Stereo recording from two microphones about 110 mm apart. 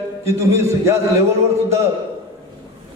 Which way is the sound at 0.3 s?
25° right (ahead or behind).